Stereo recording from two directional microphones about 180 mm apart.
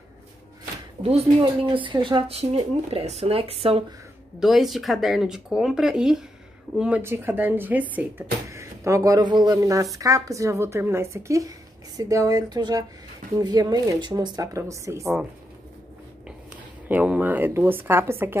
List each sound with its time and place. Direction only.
1.0 s speech: 30° right (ahead or behind)
4.4 s speech: centre (ahead or behind)
16.8 s speech: 10° right (ahead or behind)